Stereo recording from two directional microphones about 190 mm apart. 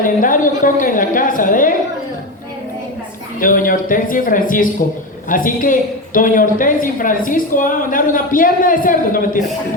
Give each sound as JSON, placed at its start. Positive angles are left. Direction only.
{"t": 0.0, "sound": "a woman's voice", "side_deg": 45}
{"t": 3.4, "sound": "a woman's voice", "side_deg": 45}